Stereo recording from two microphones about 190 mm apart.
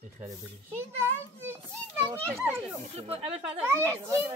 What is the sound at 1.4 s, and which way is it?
A child's voice, 15° right (ahead or behind).